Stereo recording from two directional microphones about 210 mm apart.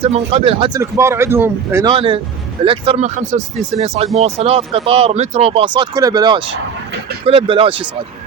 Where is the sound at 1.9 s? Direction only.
25° right (ahead or behind).